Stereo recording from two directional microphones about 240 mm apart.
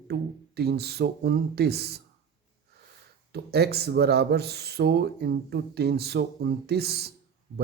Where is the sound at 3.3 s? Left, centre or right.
Right.